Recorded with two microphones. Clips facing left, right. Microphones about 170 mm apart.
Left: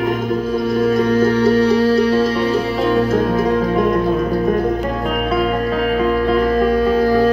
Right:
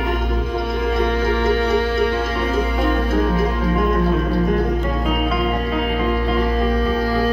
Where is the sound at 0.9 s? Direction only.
40° left (ahead or behind).